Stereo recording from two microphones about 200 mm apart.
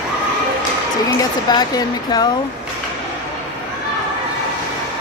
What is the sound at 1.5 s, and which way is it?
Speech, 20° left (ahead or behind).